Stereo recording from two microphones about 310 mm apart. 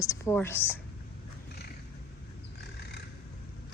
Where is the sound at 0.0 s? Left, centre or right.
Centre.